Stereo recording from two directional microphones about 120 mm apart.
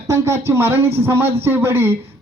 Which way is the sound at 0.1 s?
20° right (ahead or behind).